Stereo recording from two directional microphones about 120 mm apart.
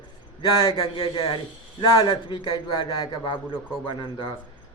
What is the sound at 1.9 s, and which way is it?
A man's voice, 35° left (ahead or behind).